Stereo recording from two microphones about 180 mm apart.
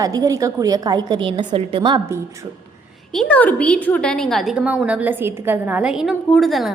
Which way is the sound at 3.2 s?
5° left (ahead or behind).